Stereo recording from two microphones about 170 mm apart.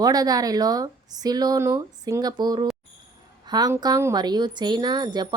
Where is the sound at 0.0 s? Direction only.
20° right (ahead or behind).